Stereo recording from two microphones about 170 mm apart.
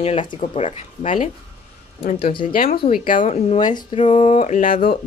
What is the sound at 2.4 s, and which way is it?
Speech, 55° left (ahead or behind).